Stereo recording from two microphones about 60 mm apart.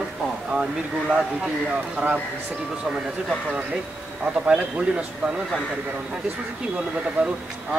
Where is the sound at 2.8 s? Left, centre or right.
Centre.